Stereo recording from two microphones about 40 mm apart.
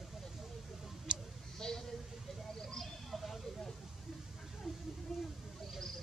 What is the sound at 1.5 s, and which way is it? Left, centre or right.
Bleat, centre.